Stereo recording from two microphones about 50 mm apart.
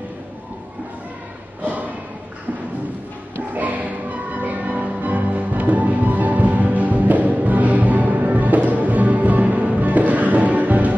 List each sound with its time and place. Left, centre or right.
3.5 s music: right